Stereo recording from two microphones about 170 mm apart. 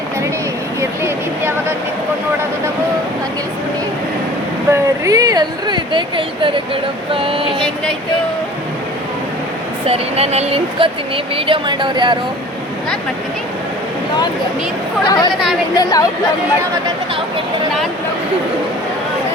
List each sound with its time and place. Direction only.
0.8 s a sound: 15° right (ahead or behind)
4.7 s speech: 20° right (ahead or behind)
9.8 s speech: 35° right (ahead or behind)
15.0 s speech: 25° left (ahead or behind)